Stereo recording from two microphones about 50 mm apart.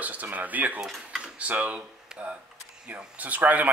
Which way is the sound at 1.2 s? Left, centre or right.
Right.